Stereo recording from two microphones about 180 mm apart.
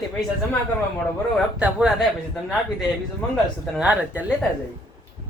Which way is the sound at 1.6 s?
5° right (ahead or behind).